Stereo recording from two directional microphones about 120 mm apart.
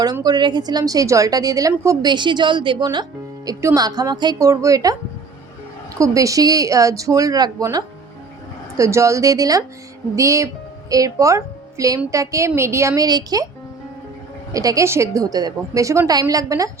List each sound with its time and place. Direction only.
0.0 s a woman's voice: 35° right (ahead or behind)
14.5 s a woman's voice: 30° right (ahead or behind)